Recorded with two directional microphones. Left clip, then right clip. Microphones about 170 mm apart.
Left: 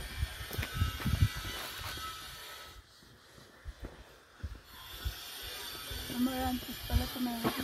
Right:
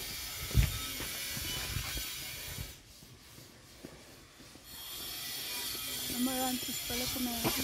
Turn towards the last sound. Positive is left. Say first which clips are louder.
# right 1 dB
turn(degrees=-10)  # may be behind; listen again after turning